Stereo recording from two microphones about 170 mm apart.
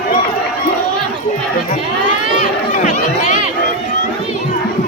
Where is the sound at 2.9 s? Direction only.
45° left (ahead or behind).